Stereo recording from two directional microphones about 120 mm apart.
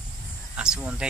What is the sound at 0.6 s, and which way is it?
Speech, 5° right (ahead or behind).